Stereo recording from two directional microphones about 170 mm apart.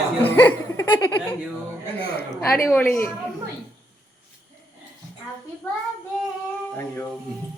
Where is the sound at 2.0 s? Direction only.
70° left (ahead or behind).